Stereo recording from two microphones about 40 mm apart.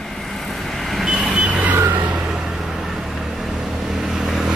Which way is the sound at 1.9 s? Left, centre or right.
Right.